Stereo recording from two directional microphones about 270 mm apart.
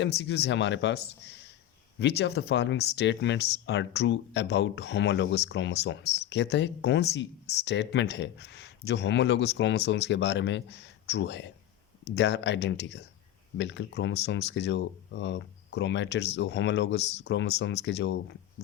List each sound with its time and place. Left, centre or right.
0.0 s speech: left